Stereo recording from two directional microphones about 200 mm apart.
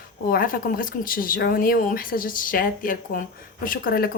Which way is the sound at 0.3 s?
45° left (ahead or behind).